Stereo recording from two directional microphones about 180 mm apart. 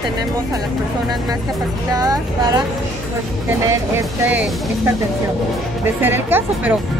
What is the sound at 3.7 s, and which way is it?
Speech, 10° right (ahead or behind).